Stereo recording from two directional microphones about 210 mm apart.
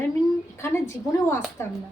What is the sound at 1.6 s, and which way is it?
Speech, 10° left (ahead or behind).